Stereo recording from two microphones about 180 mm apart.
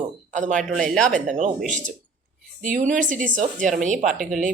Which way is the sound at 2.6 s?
45° right (ahead or behind).